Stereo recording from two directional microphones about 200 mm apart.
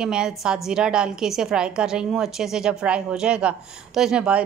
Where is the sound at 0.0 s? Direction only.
5° right (ahead or behind).